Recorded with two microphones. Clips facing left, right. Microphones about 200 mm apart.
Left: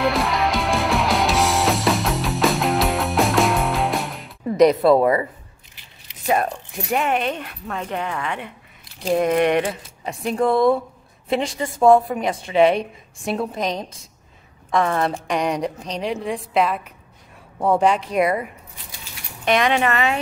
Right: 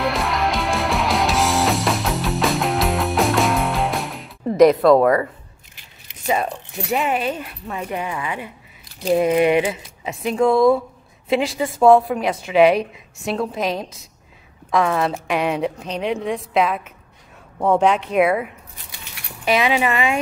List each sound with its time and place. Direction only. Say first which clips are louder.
0.0 s music: left 1 dB; centre (ahead or behind)
4.6 s a woman's voice: right 2 dB; centre (ahead or behind)
5.0 s speech: right 2 dB; 15° left (ahead or behind)
6.2 s a woman's voice: left 1 dB; centre (ahead or behind)